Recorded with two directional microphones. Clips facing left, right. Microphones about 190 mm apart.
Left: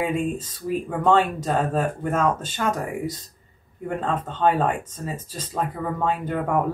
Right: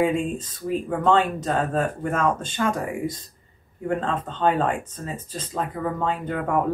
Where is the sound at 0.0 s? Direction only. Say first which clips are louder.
Right 2 dB; 5° left (ahead or behind).